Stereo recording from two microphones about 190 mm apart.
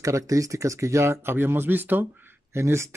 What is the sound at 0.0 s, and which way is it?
Speech, 15° right (ahead or behind).